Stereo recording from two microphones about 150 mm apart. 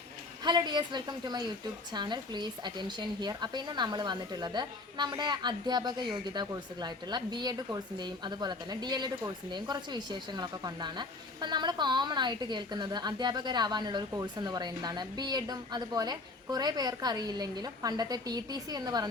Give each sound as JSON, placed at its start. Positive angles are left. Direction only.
{"t": 0.4, "sound": "a woman's voice", "side_deg": -30}